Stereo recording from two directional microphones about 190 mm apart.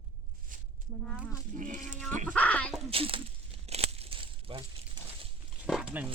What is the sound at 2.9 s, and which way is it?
Speech, 30° right (ahead or behind).